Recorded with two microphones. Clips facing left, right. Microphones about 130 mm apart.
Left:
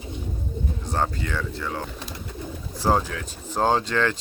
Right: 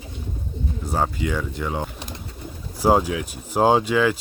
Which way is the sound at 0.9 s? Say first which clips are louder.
Right 3 dB; 10° right (ahead or behind).